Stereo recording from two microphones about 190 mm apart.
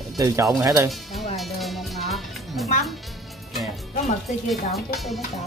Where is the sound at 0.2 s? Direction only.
15° right (ahead or behind).